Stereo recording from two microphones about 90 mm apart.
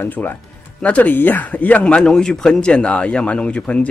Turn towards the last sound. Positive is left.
turn(degrees=10)  # may be behind; listen again after turning